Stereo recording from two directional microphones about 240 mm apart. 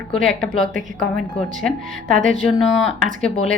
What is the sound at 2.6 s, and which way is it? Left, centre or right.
Speech, centre.